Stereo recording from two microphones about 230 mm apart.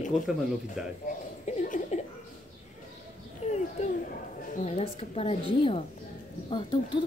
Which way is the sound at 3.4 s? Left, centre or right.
Left.